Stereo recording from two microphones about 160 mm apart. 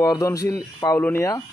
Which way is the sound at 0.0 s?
20° left (ahead or behind).